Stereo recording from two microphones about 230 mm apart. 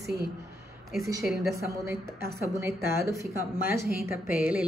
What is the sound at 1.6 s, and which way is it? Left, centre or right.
Speech, centre.